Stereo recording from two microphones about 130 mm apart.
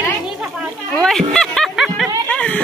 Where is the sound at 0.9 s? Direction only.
5° left (ahead or behind).